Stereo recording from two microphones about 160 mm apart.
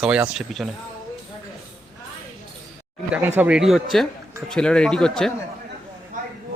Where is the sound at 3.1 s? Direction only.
10° right (ahead or behind).